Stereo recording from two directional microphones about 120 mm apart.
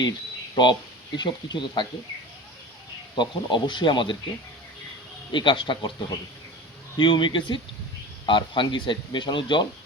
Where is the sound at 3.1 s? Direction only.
40° left (ahead or behind).